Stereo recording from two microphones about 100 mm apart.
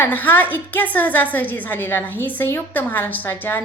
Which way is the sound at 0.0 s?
20° left (ahead or behind).